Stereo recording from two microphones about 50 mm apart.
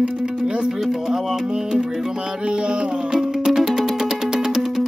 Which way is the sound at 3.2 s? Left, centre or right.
Centre.